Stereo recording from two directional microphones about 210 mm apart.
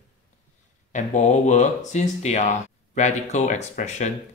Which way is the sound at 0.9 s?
35° left (ahead or behind).